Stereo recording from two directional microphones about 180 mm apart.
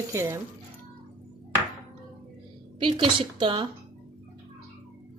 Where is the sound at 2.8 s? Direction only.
30° right (ahead or behind).